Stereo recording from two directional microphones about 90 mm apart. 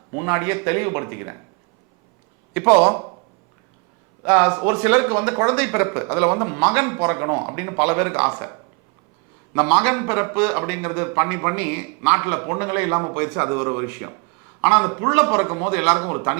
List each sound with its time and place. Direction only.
0.1 s a man's voice: 20° right (ahead or behind)
2.5 s speech: 15° right (ahead or behind)
4.3 s speech: 15° right (ahead or behind)
9.6 s a man's voice: 15° right (ahead or behind)